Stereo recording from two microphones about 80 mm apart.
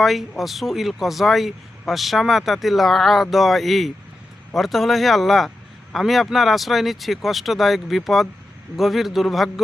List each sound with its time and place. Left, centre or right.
0.0 s speech: centre